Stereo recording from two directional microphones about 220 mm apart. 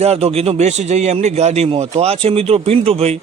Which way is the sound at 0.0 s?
30° right (ahead or behind).